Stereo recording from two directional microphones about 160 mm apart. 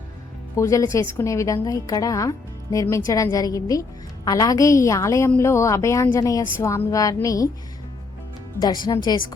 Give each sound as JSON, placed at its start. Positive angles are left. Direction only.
{"t": 0.5, "sound": "a woman's voice", "side_deg": 20}
{"t": 8.6, "sound": "a woman's voice", "side_deg": 25}